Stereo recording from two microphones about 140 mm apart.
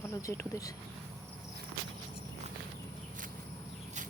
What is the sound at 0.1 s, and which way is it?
Speech, 20° left (ahead or behind).